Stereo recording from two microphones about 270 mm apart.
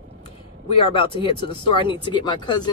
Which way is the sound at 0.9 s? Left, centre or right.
Centre.